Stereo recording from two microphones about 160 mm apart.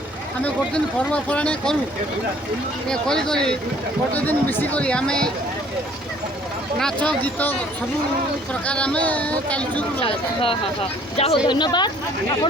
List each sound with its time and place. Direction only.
0.4 s speech: 5° left (ahead or behind)
2.9 s speech: 5° left (ahead or behind)
6.7 s speech: 5° left (ahead or behind)
8.6 s speech: 5° left (ahead or behind)
10.0 s a woman's voice: 35° left (ahead or behind)